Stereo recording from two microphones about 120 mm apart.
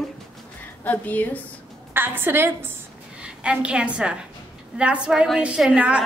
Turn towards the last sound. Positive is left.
turn(degrees=-10)  # may be behind; listen again after turning